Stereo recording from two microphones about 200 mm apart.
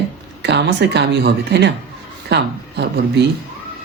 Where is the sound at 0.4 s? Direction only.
60° right (ahead or behind).